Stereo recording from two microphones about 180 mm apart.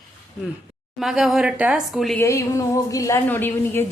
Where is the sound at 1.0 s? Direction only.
Centre (ahead or behind).